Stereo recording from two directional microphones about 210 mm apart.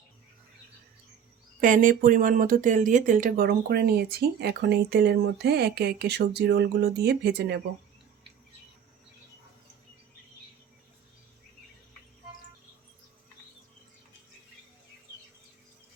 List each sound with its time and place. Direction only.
1.6 s speech: 40° right (ahead or behind)